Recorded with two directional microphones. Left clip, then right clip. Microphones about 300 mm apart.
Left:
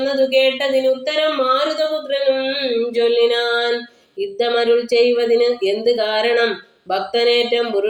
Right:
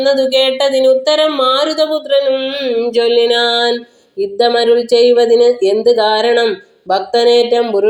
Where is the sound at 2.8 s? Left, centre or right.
Centre.